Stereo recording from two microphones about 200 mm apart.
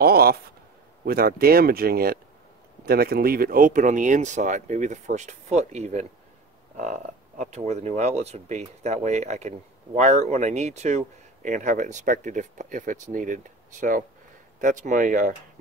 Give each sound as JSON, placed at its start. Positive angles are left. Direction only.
{"t": 0.0, "sound": "speech", "side_deg": -50}